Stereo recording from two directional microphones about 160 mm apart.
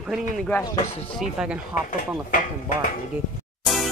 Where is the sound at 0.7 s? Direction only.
40° left (ahead or behind).